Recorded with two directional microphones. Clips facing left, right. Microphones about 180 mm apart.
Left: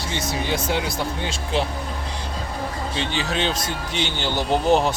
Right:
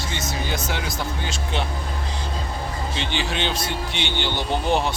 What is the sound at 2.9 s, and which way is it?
Speech, 40° left (ahead or behind).